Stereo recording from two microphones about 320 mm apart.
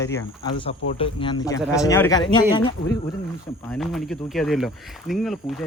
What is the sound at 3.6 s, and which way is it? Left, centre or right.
Speech, centre.